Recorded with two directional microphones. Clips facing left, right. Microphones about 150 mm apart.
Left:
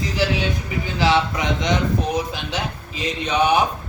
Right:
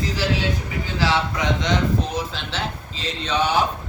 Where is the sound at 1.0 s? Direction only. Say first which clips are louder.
Left 3 dB; 20° left (ahead or behind).